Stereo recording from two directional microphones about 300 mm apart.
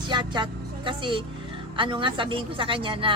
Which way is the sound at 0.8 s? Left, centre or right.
Centre.